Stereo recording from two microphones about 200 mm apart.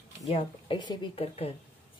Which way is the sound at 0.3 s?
25° left (ahead or behind).